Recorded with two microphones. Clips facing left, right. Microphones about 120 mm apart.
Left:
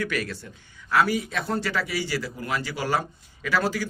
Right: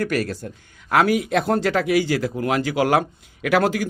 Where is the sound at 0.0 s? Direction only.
45° right (ahead or behind).